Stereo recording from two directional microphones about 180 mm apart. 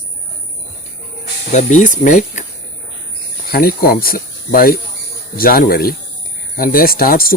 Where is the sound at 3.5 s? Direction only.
55° left (ahead or behind).